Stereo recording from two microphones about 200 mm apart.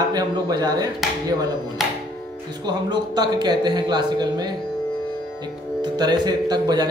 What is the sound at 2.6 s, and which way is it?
Speech, 20° right (ahead or behind).